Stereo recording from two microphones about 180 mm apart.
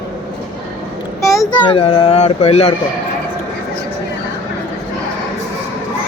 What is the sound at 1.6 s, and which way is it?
Speech, 30° left (ahead or behind).